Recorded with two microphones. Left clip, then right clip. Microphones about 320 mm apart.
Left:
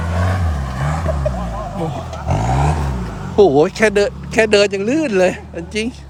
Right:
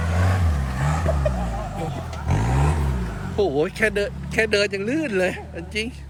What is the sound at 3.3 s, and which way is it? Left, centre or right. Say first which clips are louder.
Speech: left 10 dB; centre.